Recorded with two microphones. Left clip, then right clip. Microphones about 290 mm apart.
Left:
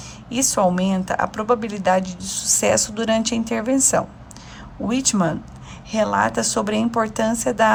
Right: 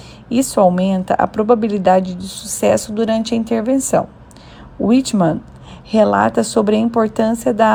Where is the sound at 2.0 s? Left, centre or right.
Centre.